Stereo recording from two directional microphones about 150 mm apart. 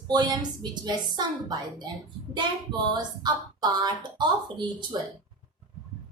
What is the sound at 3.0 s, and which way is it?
A woman's voice, 25° right (ahead or behind).